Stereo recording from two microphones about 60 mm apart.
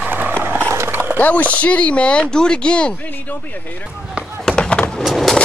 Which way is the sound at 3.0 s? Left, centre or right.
Left.